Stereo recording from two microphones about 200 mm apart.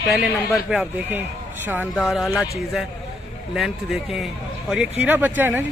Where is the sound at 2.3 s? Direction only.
15° left (ahead or behind).